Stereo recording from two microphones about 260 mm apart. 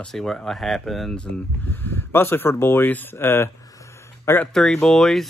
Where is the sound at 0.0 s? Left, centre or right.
Centre.